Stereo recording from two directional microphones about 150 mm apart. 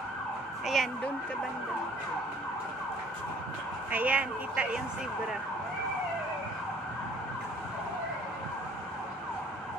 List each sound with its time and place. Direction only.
0.7 s speech: centre (ahead or behind)
3.9 s speech: 10° right (ahead or behind)